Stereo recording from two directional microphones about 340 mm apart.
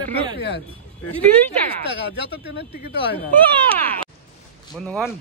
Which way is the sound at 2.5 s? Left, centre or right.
Left.